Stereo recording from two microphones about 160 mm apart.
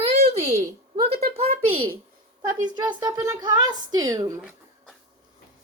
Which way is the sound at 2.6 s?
25° right (ahead or behind).